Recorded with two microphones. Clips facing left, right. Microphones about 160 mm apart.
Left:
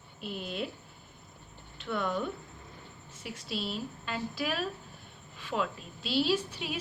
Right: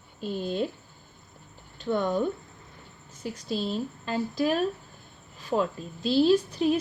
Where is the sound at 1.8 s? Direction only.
35° right (ahead or behind).